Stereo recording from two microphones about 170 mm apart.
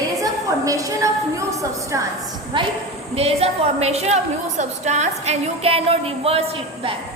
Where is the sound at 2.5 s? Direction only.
30° right (ahead or behind).